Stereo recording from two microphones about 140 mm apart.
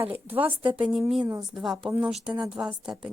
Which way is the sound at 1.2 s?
30° right (ahead or behind).